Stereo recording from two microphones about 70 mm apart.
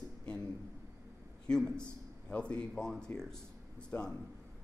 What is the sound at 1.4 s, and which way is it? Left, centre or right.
A man's voice, centre.